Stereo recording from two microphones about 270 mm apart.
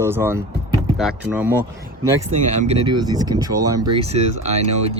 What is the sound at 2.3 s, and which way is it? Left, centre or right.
Speech, right.